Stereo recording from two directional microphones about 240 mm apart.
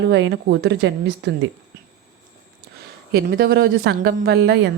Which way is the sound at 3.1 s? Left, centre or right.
Right.